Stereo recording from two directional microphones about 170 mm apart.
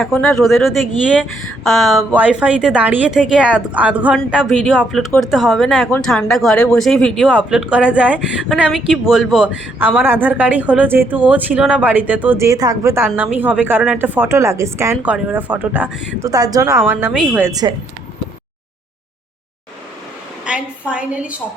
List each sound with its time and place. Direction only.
0.0 s speech: centre (ahead or behind)
16.2 s speech: 20° right (ahead or behind)
17.5 s a woman's voice: 25° right (ahead or behind)
20.4 s a woman's voice: 5° right (ahead or behind)